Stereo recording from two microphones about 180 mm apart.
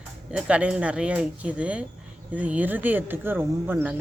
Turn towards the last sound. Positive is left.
turn(degrees=-10)  # may be behind; listen again after turning